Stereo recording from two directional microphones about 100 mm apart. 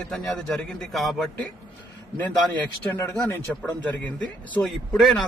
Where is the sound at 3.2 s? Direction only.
15° left (ahead or behind).